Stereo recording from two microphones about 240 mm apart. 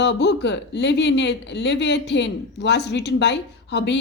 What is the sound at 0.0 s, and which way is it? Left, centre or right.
Speech, left.